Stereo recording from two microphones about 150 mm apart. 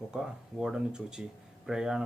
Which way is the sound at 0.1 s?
5° right (ahead or behind).